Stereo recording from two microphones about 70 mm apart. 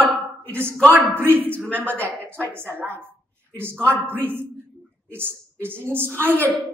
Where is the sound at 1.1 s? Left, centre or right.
Right.